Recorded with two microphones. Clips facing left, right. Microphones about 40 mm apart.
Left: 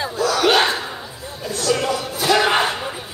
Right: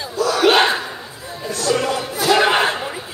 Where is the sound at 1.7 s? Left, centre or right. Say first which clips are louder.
Right 1 dB; centre.